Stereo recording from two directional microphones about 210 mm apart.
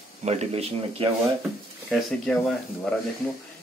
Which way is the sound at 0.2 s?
30° right (ahead or behind).